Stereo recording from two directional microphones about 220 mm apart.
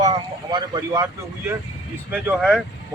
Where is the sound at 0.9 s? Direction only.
15° right (ahead or behind).